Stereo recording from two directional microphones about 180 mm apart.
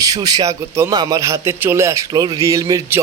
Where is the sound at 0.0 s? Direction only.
20° right (ahead or behind).